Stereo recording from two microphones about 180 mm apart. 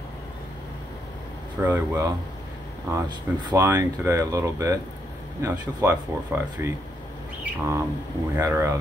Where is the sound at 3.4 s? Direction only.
15° right (ahead or behind).